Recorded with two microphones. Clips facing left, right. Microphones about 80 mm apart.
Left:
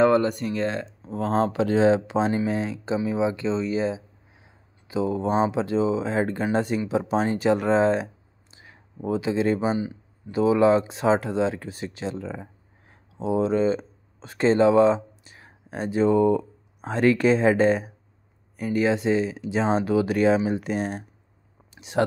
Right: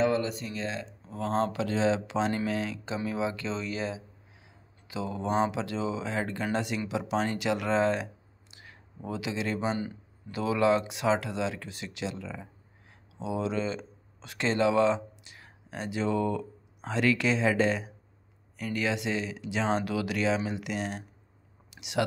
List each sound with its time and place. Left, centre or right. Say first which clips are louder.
0.0 s speech: left 8 dB; left
1.0 s speech: left 5 dB; left; by 9.9 s centre
10.3 s speech: left 7 dB; left
16.8 s speech: left 7 dB; left
18.6 s speech: left 8 dB; left